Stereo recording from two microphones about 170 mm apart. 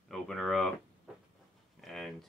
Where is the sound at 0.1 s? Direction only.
Centre (ahead or behind).